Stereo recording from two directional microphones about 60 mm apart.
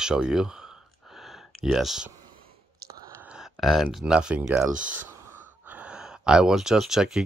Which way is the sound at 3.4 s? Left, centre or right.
Centre.